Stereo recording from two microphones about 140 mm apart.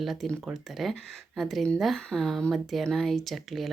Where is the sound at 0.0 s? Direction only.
Centre (ahead or behind).